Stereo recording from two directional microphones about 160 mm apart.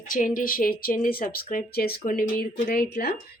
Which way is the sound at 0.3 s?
60° left (ahead or behind).